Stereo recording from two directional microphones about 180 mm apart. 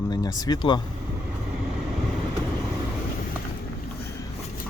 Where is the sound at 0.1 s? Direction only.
20° left (ahead or behind).